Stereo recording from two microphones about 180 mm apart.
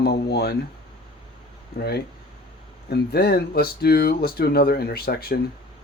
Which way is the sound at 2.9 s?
60° left (ahead or behind).